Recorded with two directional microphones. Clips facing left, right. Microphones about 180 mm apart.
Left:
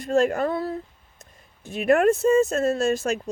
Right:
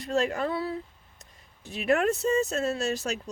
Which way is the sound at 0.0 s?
50° left (ahead or behind).